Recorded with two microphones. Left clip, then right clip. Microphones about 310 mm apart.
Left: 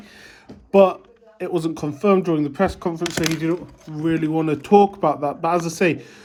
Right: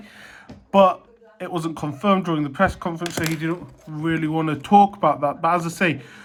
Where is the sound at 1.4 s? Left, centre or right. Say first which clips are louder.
Left 3 dB; centre.